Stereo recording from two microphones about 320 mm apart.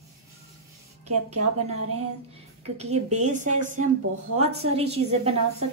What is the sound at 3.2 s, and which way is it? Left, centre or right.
Speech, right.